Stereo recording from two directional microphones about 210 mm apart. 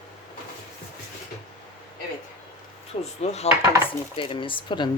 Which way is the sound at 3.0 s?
30° left (ahead or behind).